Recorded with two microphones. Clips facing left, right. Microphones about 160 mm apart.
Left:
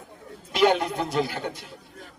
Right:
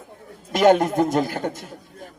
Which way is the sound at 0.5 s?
45° right (ahead or behind).